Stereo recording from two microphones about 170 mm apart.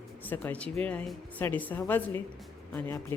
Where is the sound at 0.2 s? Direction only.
10° left (ahead or behind).